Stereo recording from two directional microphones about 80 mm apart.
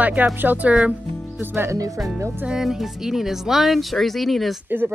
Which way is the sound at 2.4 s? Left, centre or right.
Centre.